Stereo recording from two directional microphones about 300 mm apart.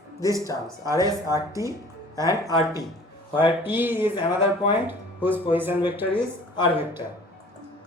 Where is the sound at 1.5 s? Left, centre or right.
Centre.